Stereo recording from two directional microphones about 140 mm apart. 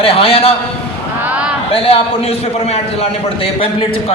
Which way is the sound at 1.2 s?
10° right (ahead or behind).